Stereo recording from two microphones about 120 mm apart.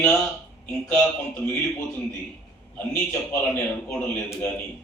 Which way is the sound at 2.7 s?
15° left (ahead or behind).